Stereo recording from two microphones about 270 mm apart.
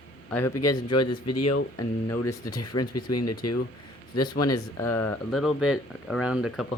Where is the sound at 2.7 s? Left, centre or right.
Left.